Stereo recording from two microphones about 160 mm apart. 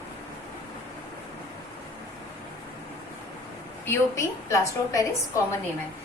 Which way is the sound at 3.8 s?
15° left (ahead or behind).